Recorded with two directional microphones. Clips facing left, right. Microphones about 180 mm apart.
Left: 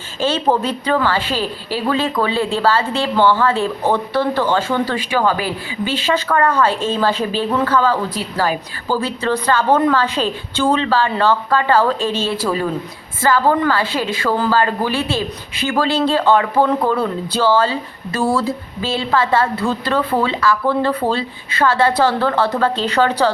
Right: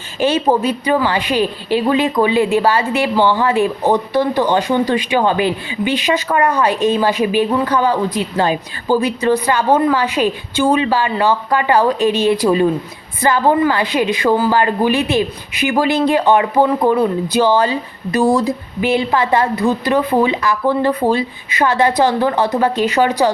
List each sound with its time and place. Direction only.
0.2 s a woman's voice: 15° right (ahead or behind)